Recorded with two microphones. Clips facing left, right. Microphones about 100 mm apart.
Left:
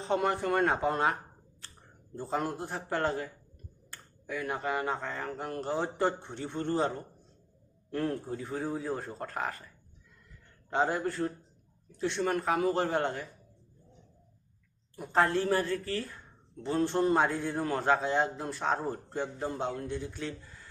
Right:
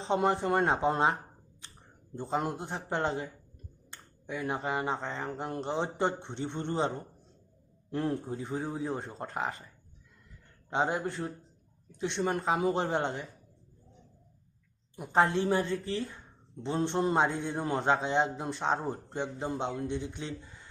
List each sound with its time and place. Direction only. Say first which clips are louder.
0.0 s a man's voice: right 1 dB; 25° right (ahead or behind)
1.6 s a sound: even; 15° right (ahead or behind)
2.1 s a man's voice: right 1 dB; 20° right (ahead or behind)
10.7 s a man's voice: left 1 dB; 20° right (ahead or behind)
14.9 s a man's voice: right 1 dB; 15° right (ahead or behind)